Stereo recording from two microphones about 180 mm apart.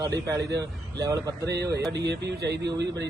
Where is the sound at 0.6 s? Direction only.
20° right (ahead or behind).